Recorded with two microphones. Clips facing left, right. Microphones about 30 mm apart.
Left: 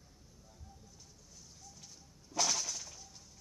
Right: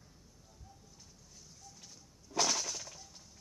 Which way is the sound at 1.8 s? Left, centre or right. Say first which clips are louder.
Even; centre.